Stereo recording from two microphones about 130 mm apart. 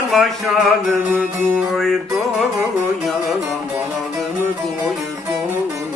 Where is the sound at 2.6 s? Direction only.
Centre (ahead or behind).